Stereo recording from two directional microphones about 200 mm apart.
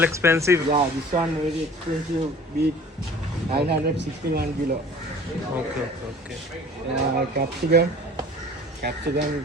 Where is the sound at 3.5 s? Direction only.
50° right (ahead or behind).